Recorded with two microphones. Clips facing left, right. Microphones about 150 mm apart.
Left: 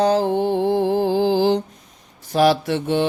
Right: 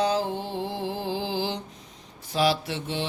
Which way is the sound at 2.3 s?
50° left (ahead or behind).